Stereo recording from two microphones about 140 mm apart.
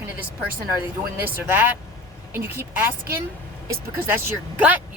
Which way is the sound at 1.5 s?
15° right (ahead or behind).